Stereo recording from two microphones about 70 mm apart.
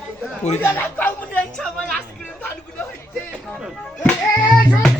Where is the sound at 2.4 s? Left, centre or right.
Left.